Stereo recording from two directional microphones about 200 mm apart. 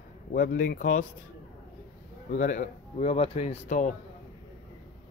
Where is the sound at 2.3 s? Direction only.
40° left (ahead or behind).